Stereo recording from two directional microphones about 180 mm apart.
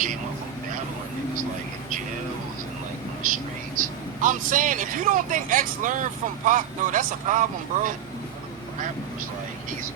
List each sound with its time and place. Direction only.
3.2 s vehicle: 50° right (ahead or behind)
3.8 s speech: 45° right (ahead or behind)